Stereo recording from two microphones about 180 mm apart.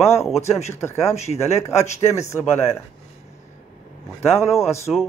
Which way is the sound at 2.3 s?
15° left (ahead or behind).